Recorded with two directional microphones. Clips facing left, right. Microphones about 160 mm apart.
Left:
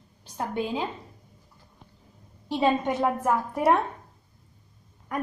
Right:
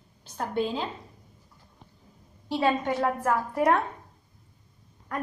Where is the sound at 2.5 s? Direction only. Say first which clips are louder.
Left 1 dB; 20° left (ahead or behind).